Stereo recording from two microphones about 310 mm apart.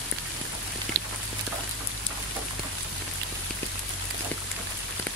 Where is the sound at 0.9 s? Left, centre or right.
Right.